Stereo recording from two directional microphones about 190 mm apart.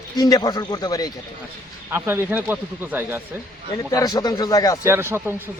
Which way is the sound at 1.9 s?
10° right (ahead or behind).